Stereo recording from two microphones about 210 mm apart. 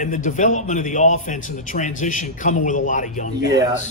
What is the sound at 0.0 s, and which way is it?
A man's voice, 35° left (ahead or behind).